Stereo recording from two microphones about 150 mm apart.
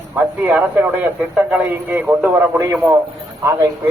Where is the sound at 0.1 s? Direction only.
10° right (ahead or behind).